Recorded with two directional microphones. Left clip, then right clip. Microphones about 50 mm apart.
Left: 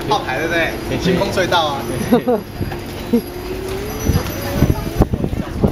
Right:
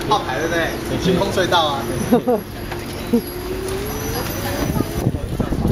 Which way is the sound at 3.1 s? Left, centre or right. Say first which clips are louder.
Left 2 dB; left.